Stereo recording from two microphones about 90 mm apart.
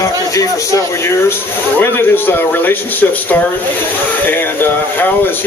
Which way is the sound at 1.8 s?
25° left (ahead or behind).